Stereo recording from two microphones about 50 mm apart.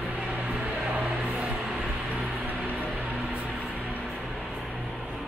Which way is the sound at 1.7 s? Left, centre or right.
Right.